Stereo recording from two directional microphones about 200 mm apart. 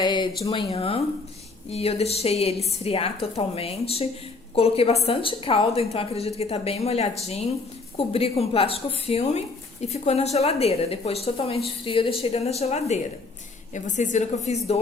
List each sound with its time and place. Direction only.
0.0 s a woman's voice: 20° left (ahead or behind)